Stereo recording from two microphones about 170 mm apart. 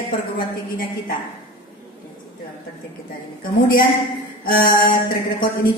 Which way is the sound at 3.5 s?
55° left (ahead or behind).